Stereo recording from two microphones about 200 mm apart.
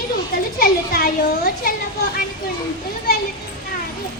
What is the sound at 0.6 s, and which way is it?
A child's voice, 50° left (ahead or behind).